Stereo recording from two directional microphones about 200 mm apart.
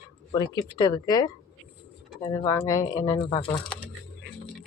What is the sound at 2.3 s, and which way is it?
Speech, 15° left (ahead or behind).